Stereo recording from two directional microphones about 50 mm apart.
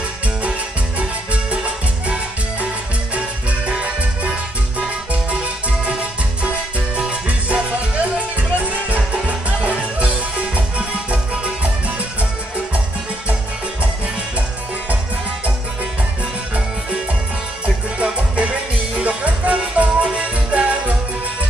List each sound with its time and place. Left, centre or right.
0.4 s music: right
3.8 s music: right
17.6 s music: right